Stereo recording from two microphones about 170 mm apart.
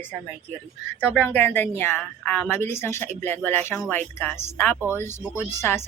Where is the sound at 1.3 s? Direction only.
10° left (ahead or behind).